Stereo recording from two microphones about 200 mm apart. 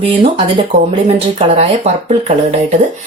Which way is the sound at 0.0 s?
25° right (ahead or behind).